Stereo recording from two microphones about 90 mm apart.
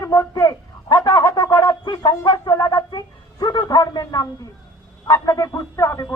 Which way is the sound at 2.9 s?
50° left (ahead or behind).